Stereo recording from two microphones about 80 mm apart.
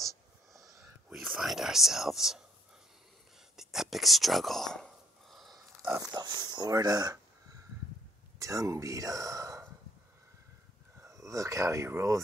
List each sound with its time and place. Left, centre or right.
1.4 s speech: centre
3.5 s whispering: centre
5.9 s speech: right
8.4 s speech: right
11.0 s speech: right